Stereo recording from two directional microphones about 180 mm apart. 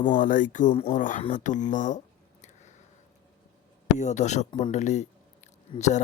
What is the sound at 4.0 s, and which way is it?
Speech, 40° left (ahead or behind).